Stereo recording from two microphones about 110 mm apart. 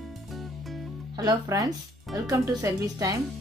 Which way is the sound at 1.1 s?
35° right (ahead or behind).